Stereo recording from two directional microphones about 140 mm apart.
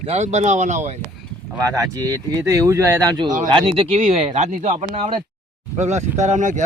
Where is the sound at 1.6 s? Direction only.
25° right (ahead or behind).